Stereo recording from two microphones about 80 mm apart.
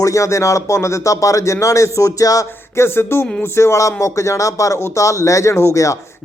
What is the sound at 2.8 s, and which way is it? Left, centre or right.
Speech, left.